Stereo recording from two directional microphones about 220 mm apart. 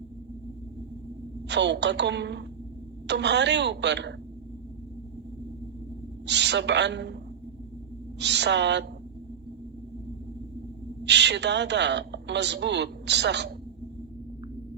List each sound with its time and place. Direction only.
1.5 s a woman's voice: 50° right (ahead or behind)
6.2 s a woman's voice: 50° right (ahead or behind)
8.2 s a woman's voice: 50° right (ahead or behind)
11.0 s a woman's voice: 50° right (ahead or behind)